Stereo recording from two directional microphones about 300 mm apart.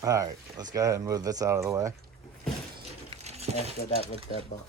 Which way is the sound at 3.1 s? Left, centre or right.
Right.